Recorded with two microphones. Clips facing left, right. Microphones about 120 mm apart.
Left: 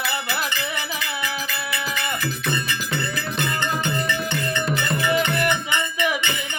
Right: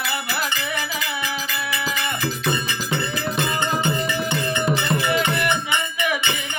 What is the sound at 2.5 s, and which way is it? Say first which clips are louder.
Music: right 2 dB; 25° right (ahead or behind).